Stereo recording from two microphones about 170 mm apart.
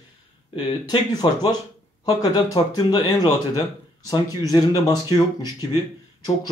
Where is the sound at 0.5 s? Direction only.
25° left (ahead or behind).